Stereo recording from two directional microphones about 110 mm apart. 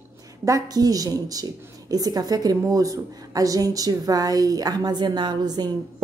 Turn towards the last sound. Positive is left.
turn(degrees=-40)  # may be behind; listen again after turning